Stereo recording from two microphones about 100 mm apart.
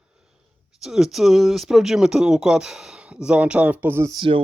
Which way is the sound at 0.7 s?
5° right (ahead or behind).